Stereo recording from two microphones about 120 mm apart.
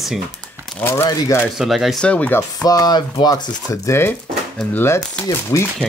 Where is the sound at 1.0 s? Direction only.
30° left (ahead or behind).